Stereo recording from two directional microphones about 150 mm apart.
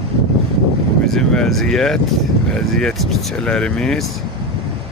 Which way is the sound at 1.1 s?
5° left (ahead or behind).